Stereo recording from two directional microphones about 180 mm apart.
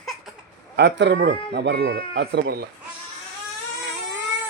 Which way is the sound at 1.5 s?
65° right (ahead or behind).